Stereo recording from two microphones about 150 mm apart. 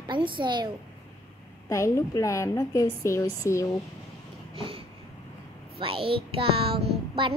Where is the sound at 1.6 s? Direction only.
20° left (ahead or behind).